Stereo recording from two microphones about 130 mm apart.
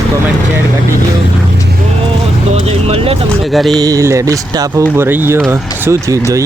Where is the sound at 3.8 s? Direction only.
25° right (ahead or behind).